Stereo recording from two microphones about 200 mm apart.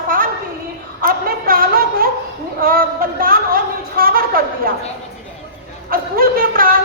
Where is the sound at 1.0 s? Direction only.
45° right (ahead or behind).